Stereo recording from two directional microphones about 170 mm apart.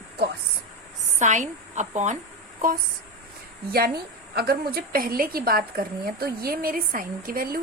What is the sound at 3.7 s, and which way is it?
A woman's voice, 65° right (ahead or behind).